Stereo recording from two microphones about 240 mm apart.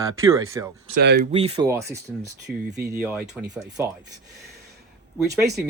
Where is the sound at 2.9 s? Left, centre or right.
Centre.